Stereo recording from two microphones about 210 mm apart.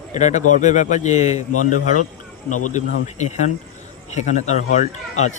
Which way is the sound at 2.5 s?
90° left.